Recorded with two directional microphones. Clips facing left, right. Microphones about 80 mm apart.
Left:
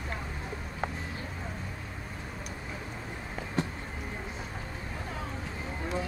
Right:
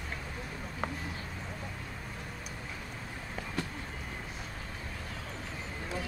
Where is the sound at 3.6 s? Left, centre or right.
Left.